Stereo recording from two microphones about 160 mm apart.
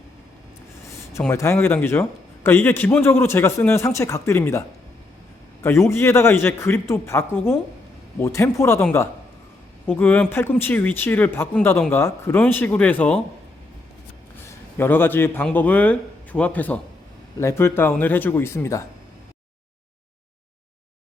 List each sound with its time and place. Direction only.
1.2 s a man's voice: 15° left (ahead or behind)
5.6 s a man's voice: 15° left (ahead or behind)
14.4 s a man's voice: 15° left (ahead or behind)